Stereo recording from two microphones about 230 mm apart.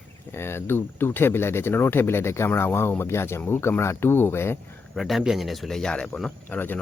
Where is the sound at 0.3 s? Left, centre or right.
Centre.